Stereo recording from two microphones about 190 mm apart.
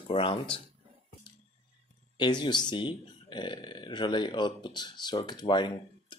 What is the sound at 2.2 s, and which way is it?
Speech, 20° left (ahead or behind).